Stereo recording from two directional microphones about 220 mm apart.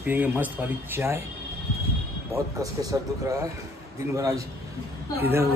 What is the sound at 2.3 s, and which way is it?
Speech, 15° right (ahead or behind).